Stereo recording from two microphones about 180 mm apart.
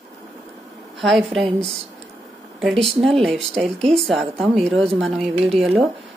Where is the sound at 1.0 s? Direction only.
Centre (ahead or behind).